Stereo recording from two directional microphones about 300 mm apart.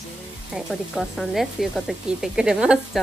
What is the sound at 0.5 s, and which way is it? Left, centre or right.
Speech, centre.